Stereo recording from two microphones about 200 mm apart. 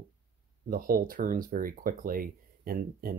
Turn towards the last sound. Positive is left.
turn(degrees=-45)  # may be behind; listen again after turning